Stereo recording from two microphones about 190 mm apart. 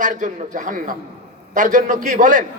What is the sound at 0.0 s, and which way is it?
A man's voice, 45° right (ahead or behind).